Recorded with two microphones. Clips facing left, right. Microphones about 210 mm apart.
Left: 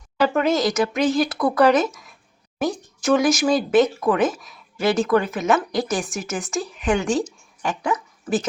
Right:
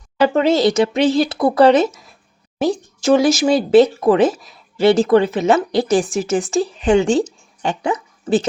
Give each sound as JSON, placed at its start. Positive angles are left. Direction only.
{"t": 0.2, "sound": "speech", "side_deg": -30}